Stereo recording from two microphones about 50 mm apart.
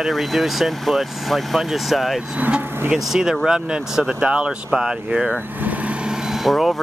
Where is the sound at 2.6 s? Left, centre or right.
Right.